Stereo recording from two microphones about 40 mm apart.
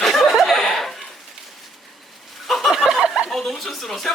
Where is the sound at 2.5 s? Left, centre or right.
Centre.